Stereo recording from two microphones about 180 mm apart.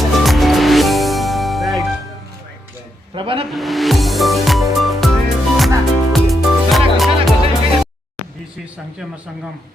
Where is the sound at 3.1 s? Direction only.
30° right (ahead or behind).